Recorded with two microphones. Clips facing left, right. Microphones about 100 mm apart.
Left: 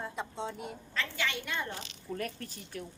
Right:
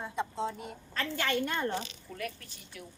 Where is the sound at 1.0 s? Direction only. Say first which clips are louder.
Right 4 dB; 45° right (ahead or behind).